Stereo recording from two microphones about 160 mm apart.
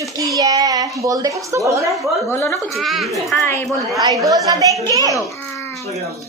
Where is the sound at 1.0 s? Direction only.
20° right (ahead or behind).